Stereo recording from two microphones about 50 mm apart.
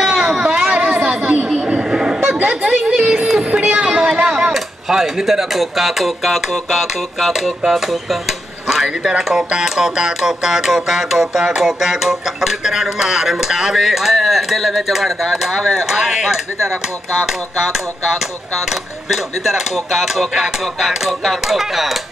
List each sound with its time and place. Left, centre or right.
0.0 s a sound: centre
0.5 s chatter: right
1.5 s a sound: centre
4.6 s speech: centre
8.8 s speech: centre
17.3 s speech: centre